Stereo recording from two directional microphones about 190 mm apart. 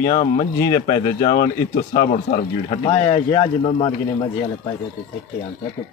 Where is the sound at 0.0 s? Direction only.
40° left (ahead or behind).